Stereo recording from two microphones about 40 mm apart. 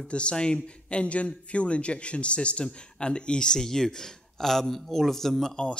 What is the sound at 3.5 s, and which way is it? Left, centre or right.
Speech, centre.